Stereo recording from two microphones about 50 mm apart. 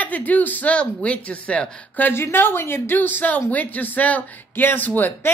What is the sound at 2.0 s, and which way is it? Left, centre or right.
Speech, left.